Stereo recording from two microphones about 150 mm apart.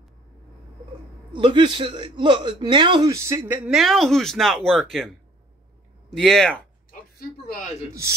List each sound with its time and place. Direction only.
1.3 s a man's voice: 30° right (ahead or behind)
3.6 s speech: centre (ahead or behind)
6.1 s speech: 5° left (ahead or behind)
6.9 s a sound: 90° left